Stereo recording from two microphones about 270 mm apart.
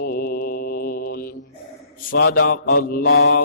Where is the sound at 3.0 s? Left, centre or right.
Left.